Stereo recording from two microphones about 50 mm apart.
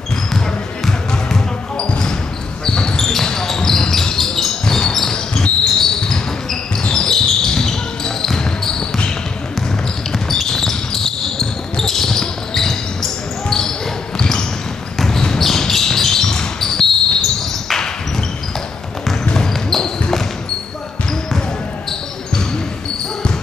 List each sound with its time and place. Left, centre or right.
0.8 s basketball bounce: centre
1.8 s basketball bounce: centre
10.1 s basketball bounce: centre
19.2 s basketball bounce: centre